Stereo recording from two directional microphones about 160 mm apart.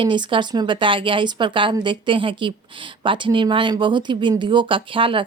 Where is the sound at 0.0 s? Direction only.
30° right (ahead or behind).